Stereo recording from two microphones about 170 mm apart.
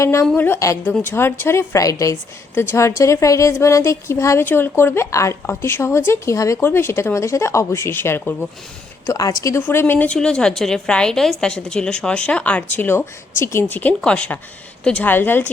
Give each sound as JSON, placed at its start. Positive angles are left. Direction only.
{"t": 0.0, "sound": "a woman's voice", "side_deg": 15}
{"t": 9.0, "sound": "a woman's voice", "side_deg": 20}